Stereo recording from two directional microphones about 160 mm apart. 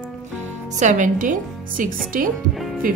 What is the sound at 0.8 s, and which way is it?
A woman's voice, 50° right (ahead or behind).